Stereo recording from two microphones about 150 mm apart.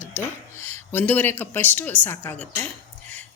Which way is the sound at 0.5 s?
15° left (ahead or behind).